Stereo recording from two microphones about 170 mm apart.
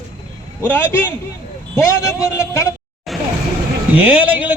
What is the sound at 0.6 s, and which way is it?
A man's voice, 10° left (ahead or behind).